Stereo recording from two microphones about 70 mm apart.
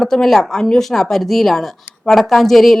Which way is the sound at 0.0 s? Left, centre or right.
Centre.